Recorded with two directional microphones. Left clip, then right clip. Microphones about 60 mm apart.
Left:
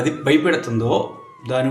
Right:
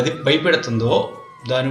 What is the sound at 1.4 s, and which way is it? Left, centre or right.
Speech, centre.